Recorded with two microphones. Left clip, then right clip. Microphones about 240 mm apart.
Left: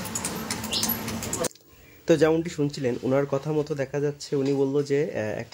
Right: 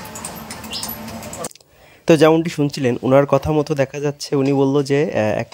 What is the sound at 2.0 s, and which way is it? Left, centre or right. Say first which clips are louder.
Speech: right 8 dB; right.